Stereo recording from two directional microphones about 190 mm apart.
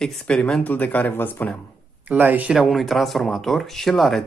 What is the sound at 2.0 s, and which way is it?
Speech, 10° right (ahead or behind).